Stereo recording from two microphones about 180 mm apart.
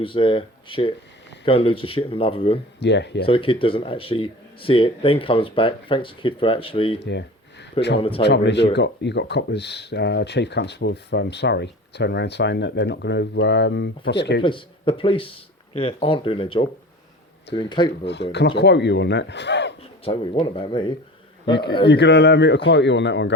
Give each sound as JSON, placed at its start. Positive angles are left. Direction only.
{"t": 0.0, "sound": "speech", "side_deg": 30}
{"t": 2.8, "sound": "speech", "side_deg": 75}
{"t": 3.2, "sound": "speech", "side_deg": 30}
{"t": 7.0, "sound": "speech", "side_deg": 75}
{"t": 7.9, "sound": "speech", "side_deg": 30}
{"t": 8.2, "sound": "speech", "side_deg": 70}
{"t": 14.4, "sound": "speech", "side_deg": 30}
{"t": 18.0, "sound": "speech", "side_deg": 70}
{"t": 20.1, "sound": "speech", "side_deg": 30}
{"t": 21.8, "sound": "speech", "side_deg": 70}